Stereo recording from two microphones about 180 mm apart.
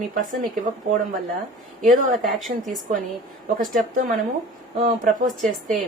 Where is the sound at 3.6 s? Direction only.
50° right (ahead or behind).